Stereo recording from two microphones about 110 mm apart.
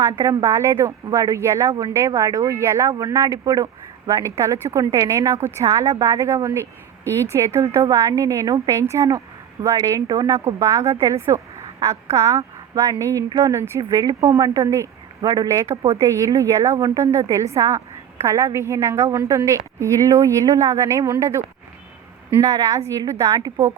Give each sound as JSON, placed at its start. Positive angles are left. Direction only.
{"t": 0.4, "sound": "a woman's voice", "side_deg": -25}
{"t": 15.2, "sound": "a woman's voice", "side_deg": -35}